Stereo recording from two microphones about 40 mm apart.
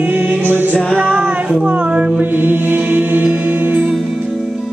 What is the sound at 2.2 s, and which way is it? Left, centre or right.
Music, right.